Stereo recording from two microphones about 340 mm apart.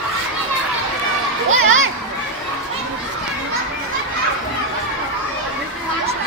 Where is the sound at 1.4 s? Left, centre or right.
Right.